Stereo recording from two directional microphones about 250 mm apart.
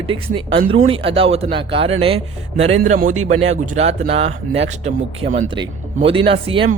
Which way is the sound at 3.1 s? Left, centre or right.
Right.